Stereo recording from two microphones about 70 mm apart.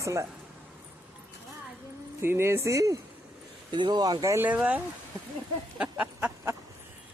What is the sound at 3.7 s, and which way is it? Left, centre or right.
Speech, right.